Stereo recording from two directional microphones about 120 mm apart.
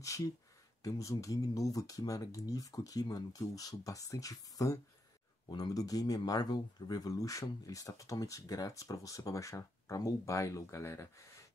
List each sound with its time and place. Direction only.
0.8 s speech: 30° left (ahead or behind)